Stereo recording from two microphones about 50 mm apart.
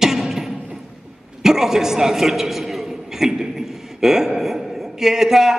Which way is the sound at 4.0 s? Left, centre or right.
Centre.